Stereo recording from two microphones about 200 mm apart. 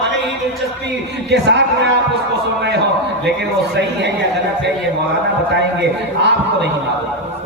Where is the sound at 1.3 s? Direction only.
60° right (ahead or behind).